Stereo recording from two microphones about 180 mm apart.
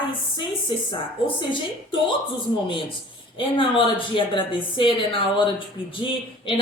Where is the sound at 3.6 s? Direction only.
30° left (ahead or behind).